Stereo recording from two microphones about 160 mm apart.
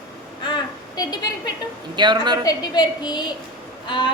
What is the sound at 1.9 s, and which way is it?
Speech, 30° right (ahead or behind).